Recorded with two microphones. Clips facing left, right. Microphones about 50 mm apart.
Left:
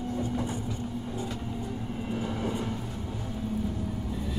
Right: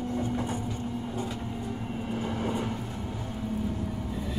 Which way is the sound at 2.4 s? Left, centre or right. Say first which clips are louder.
Right 1 dB; right.